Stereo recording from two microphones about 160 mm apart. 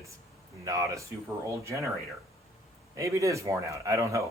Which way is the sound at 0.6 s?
20° right (ahead or behind).